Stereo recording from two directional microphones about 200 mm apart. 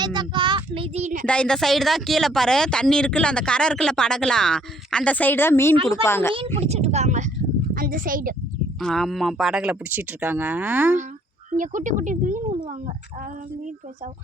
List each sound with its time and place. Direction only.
0.0 s child singing: 20° right (ahead or behind); by 1.3 s 40° right (ahead or behind)
1.3 s speech: 5° left (ahead or behind)
6.6 s speech: 35° right (ahead or behind)
8.8 s speech: centre (ahead or behind)
11.5 s speech: 40° right (ahead or behind)